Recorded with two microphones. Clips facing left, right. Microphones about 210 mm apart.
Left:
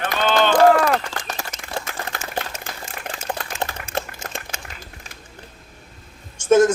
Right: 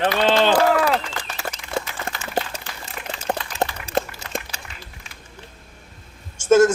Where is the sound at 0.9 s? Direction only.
45° left (ahead or behind).